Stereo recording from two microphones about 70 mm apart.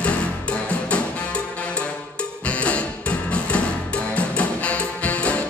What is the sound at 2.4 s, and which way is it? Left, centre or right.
Music, centre.